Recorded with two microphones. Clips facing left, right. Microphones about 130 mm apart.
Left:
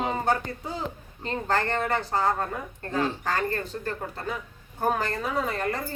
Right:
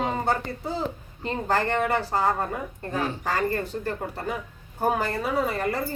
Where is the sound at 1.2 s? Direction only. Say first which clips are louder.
Right 2 dB; 10° right (ahead or behind).